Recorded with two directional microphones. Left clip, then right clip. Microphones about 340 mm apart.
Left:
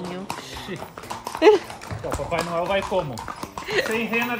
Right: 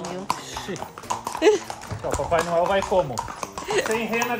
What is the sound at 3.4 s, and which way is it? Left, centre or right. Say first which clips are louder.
Dog: left 1 dB; centre.